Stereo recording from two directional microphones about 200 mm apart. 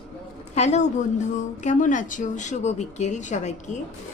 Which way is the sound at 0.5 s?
35° left (ahead or behind).